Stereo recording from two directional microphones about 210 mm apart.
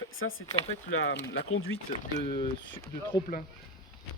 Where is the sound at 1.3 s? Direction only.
75° left (ahead or behind).